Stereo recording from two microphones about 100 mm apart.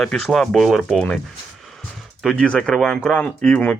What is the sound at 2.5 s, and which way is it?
Speech, 10° left (ahead or behind).